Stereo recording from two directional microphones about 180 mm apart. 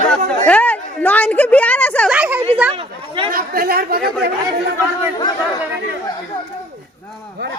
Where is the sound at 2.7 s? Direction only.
30° right (ahead or behind).